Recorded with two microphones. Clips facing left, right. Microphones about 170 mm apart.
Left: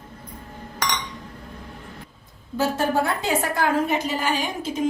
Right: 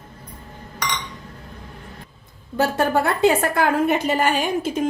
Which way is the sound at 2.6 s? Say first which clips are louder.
Right 2 dB; 60° right (ahead or behind).